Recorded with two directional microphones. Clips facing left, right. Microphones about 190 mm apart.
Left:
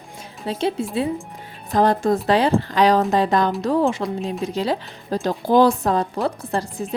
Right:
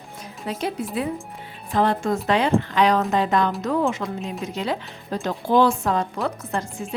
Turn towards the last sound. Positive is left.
turn(degrees=35)  # may be behind; listen again after turning